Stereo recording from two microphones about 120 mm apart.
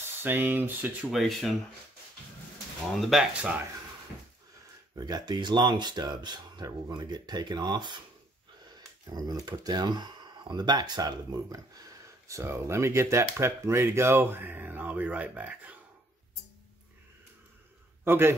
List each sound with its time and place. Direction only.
0.2 s speech: 15° right (ahead or behind)
1.1 s speech: centre (ahead or behind)
2.9 s speech: centre (ahead or behind)
4.9 s speech: 35° right (ahead or behind)
9.0 s speech: 35° right (ahead or behind); by 15.7 s 15° right (ahead or behind)
18.0 s a man's voice: 20° right (ahead or behind)